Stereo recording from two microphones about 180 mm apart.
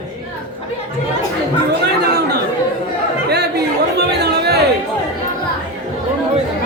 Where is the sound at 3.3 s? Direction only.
65° right (ahead or behind).